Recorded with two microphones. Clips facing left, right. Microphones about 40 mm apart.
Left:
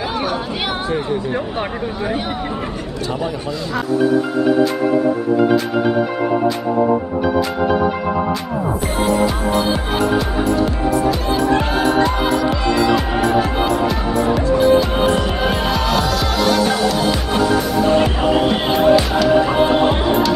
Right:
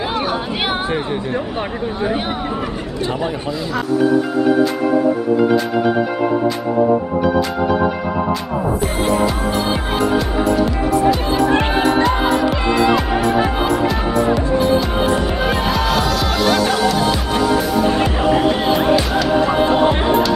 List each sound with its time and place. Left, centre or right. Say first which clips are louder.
0.2 s chatter: right 1 dB; centre
0.8 s speech: even; right
8.8 s music: left 1 dB; centre
10.9 s music: right 3 dB; centre
11.5 s music: right 1 dB; right
12.9 s music: even; centre
18.9 s music: left 2 dB; centre